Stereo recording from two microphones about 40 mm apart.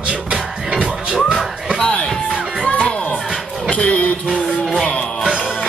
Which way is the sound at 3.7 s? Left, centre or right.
Left.